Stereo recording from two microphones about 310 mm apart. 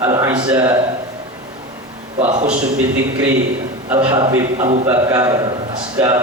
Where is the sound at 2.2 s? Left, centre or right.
Right.